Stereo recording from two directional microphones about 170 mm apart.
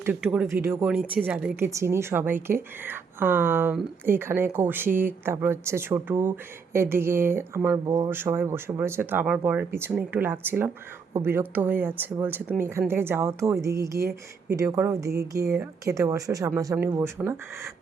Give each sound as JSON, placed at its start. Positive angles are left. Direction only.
{"t": 0.0, "sound": "speech", "side_deg": -5}